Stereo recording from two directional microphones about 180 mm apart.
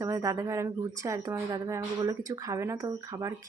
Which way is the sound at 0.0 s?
15° right (ahead or behind).